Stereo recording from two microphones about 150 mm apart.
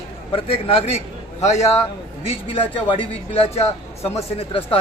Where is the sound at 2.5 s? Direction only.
35° left (ahead or behind).